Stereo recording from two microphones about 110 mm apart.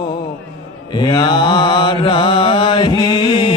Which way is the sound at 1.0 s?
40° left (ahead or behind).